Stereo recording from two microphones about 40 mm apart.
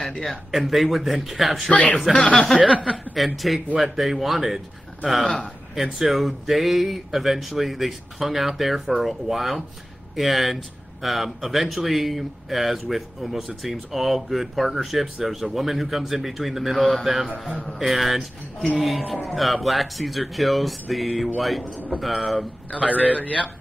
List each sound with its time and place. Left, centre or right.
0.2 s speech: centre
2.0 s speech: centre
3.3 s speech: centre
22.8 s a man's voice: right
23.0 s a man's voice: left